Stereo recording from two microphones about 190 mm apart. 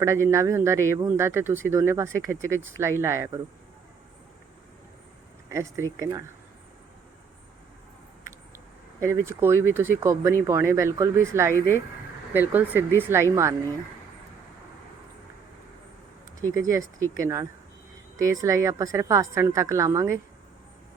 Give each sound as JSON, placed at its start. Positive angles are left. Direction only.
{"t": 0.0, "sound": "speech", "side_deg": -15}
{"t": 5.5, "sound": "speech", "side_deg": -15}
{"t": 8.2, "sound": "speech", "side_deg": -15}
{"t": 16.6, "sound": "speech", "side_deg": -15}